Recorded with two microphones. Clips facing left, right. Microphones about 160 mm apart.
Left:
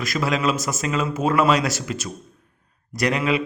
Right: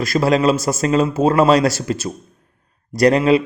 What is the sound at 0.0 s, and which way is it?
A man's voice, 35° right (ahead or behind).